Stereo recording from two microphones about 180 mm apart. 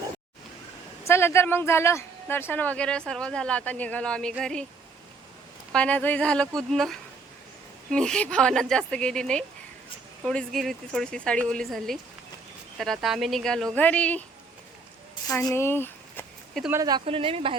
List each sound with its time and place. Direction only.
1.0 s speech: 15° left (ahead or behind)
5.7 s speech: 5° left (ahead or behind)
15.3 s speech: 15° left (ahead or behind)
16.7 s speech: 20° right (ahead or behind)